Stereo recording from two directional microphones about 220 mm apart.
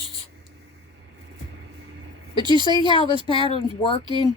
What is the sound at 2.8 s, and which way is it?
Speech, 20° left (ahead or behind).